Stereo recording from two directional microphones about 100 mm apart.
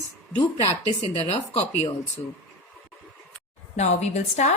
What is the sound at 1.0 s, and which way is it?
Speech, 90° left.